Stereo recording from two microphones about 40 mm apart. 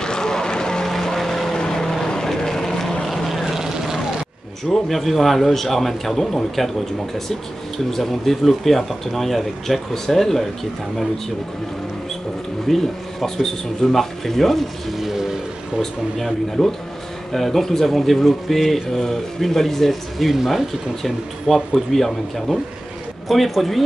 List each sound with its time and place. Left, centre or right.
0.0 s vehicle: centre
4.6 s speech: centre
12.6 s speech: centre
15.0 s vehicle: centre
15.8 s speech: centre